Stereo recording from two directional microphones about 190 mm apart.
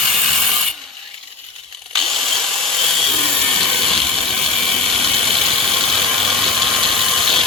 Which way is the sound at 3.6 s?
Centre (ahead or behind).